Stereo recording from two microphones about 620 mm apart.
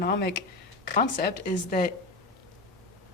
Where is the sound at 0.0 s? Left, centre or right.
Centre.